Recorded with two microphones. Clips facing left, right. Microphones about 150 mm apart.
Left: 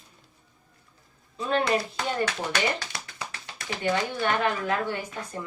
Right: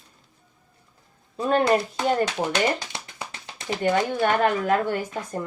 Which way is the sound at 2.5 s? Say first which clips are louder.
Right 4 dB; 20° right (ahead or behind).